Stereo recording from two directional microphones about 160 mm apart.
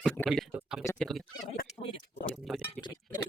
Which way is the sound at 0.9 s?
5° left (ahead or behind).